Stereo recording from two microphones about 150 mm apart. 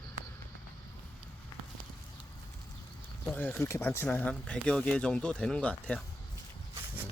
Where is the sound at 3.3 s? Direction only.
10° left (ahead or behind).